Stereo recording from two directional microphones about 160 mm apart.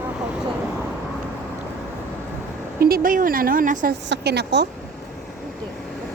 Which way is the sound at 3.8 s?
90° right.